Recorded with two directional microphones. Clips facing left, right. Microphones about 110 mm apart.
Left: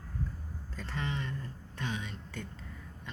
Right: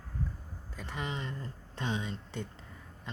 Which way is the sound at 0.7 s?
15° right (ahead or behind).